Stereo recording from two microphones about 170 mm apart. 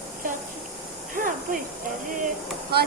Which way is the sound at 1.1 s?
55° right (ahead or behind).